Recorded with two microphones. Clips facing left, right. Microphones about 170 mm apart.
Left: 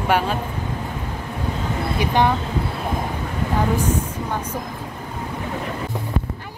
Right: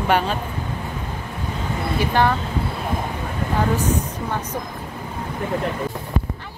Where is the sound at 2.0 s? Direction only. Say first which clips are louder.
Even; 15° left (ahead or behind).